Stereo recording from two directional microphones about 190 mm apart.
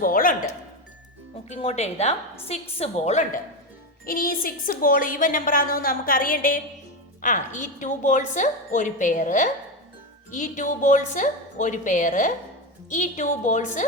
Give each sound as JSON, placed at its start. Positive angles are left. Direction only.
{"t": 0.0, "sound": "a woman's voice", "side_deg": 50}
{"t": 1.5, "sound": "a woman's voice", "side_deg": 35}
{"t": 4.0, "sound": "a woman's voice", "side_deg": 50}